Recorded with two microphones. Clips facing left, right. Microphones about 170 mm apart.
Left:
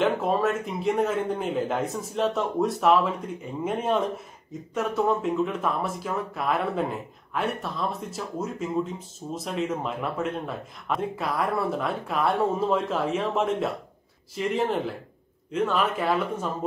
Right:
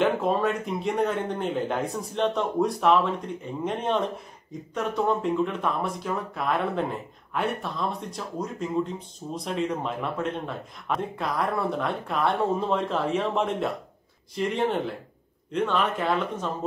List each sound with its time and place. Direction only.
0.0 s a man's voice: centre (ahead or behind)